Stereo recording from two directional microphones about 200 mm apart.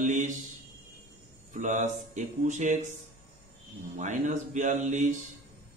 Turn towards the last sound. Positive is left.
turn(degrees=-35)  # may be behind; listen again after turning